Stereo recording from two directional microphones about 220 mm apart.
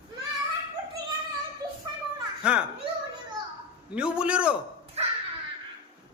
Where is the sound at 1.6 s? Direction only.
15° right (ahead or behind).